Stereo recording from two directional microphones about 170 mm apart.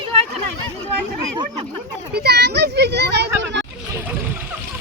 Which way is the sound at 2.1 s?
75° right (ahead or behind).